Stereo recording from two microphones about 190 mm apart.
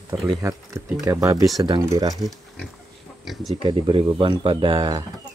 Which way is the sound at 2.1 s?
Centre (ahead or behind).